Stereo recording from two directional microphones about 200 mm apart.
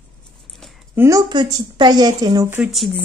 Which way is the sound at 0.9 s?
15° right (ahead or behind).